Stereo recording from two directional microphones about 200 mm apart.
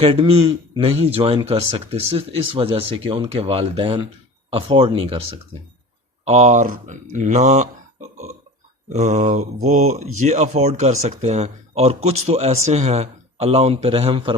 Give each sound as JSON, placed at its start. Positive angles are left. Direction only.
{"t": 0.0, "sound": "speech", "side_deg": -25}
{"t": 8.1, "sound": "burping", "side_deg": -35}
{"t": 8.9, "sound": "speech", "side_deg": -35}